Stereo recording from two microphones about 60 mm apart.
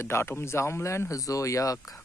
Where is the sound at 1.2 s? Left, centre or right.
Left.